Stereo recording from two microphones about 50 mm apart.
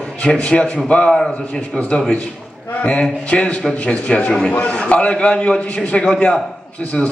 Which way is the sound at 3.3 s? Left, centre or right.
Left.